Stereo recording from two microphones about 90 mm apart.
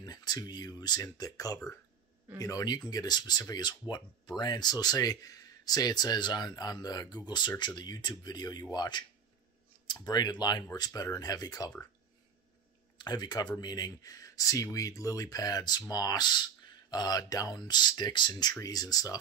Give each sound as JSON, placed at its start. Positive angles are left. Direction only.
{"t": 0.0, "sound": "speech", "side_deg": 50}
{"t": 10.0, "sound": "speech", "side_deg": 50}
{"t": 12.9, "sound": "speech", "side_deg": 50}